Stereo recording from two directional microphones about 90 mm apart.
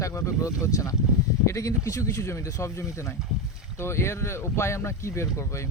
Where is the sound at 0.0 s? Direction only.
35° left (ahead or behind).